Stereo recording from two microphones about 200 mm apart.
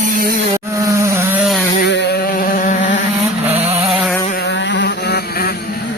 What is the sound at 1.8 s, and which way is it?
Vehicle, 60° left (ahead or behind).